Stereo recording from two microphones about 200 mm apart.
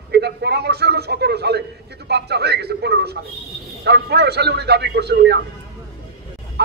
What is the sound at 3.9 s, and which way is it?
A man's voice, 55° right (ahead or behind).